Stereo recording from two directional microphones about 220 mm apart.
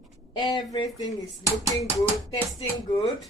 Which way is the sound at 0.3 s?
20° left (ahead or behind).